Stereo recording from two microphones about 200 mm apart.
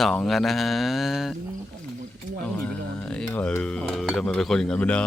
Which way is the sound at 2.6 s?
5° left (ahead or behind).